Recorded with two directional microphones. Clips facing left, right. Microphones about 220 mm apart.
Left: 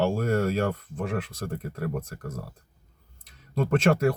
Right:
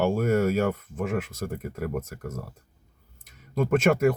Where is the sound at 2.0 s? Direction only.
25° right (ahead or behind).